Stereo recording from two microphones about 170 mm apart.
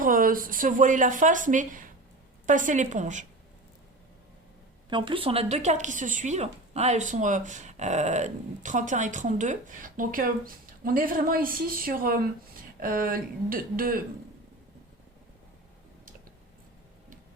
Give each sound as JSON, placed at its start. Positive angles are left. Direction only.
{"t": 0.0, "sound": "a woman's voice", "side_deg": -55}
{"t": 4.9, "sound": "a woman's voice", "side_deg": -30}